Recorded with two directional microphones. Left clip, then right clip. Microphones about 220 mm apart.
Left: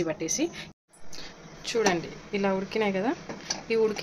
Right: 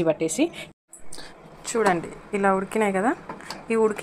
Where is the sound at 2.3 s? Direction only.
Centre (ahead or behind).